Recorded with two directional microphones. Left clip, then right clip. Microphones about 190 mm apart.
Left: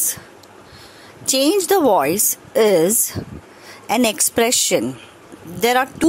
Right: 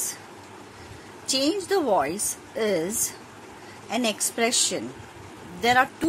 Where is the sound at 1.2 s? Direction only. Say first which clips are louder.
Left 8 dB; 55° left (ahead or behind).